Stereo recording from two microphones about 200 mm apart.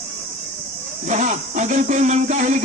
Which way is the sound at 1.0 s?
35° right (ahead or behind).